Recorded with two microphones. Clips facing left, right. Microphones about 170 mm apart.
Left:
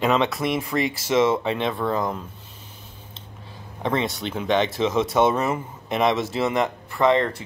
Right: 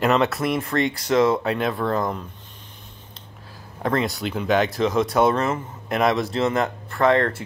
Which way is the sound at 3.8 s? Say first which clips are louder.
Right 1 dB; centre (ahead or behind).